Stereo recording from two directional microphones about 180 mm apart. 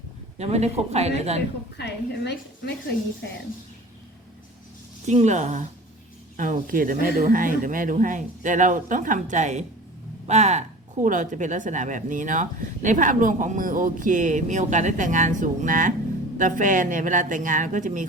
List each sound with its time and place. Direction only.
0.3 s speech: 35° right (ahead or behind)
1.8 s a woman's voice: 70° left (ahead or behind)
5.0 s speech: 40° right (ahead or behind)